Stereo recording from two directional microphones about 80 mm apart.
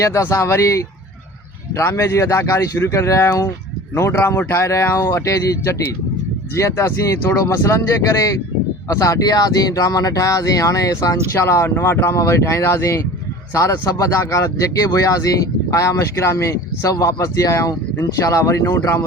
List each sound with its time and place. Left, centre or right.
0.0 s speech: left